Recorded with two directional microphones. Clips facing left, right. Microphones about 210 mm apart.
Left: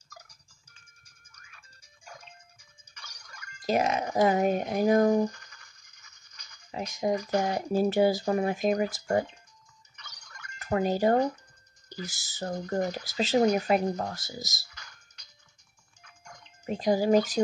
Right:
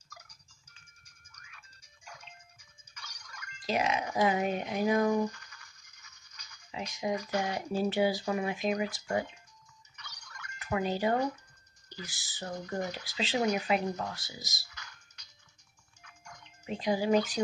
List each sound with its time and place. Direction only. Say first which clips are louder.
3.3 s speech: left 5 dB; 45° left (ahead or behind)
6.7 s speech: left 5 dB; 45° left (ahead or behind)
10.6 s speech: left 5 dB; 45° left (ahead or behind)
16.6 s speech: left 5 dB; 45° left (ahead or behind)